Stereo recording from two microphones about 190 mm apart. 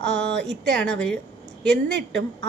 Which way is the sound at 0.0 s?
65° right (ahead or behind).